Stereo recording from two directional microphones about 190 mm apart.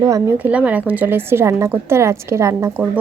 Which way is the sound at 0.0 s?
15° right (ahead or behind).